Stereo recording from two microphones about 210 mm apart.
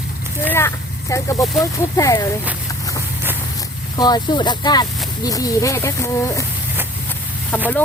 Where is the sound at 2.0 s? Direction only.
15° left (ahead or behind).